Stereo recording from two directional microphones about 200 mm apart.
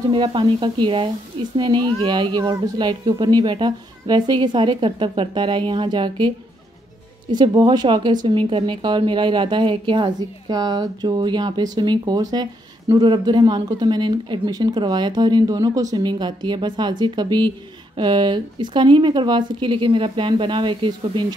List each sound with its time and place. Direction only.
0.1 s speech: 25° right (ahead or behind)